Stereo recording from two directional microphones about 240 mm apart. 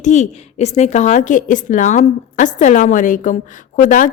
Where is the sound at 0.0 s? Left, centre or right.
Left.